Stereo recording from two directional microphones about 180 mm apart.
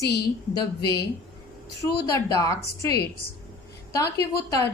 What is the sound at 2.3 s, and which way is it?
Speech, 20° left (ahead or behind).